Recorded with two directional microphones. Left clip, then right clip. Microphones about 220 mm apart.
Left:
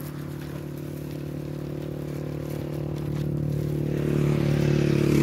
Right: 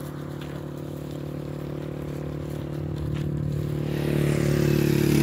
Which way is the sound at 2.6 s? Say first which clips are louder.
Left 1 dB; 25° right (ahead or behind).